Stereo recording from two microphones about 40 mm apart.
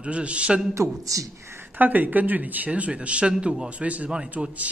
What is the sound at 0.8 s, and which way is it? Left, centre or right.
Speech, right.